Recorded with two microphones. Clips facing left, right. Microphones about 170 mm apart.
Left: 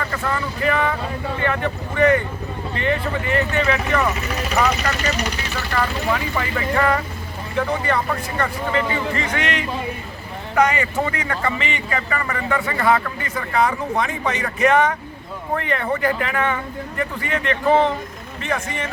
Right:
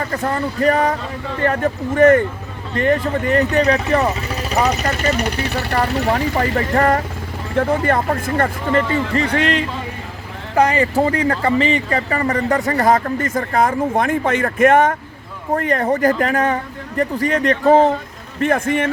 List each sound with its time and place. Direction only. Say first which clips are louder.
0.0 s speech: right 4 dB; 35° right (ahead or behind); by 5.6 s 60° right (ahead or behind)
6.1 s speech: right 5 dB; 35° right (ahead or behind)
9.1 s speech: right 6 dB; 35° right (ahead or behind)
18.3 s speech: right 9 dB; 50° right (ahead or behind)